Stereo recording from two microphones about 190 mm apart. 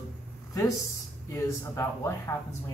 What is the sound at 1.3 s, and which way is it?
Speech, 15° left (ahead or behind).